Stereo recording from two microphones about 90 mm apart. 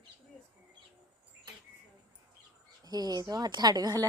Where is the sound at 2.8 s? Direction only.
50° right (ahead or behind).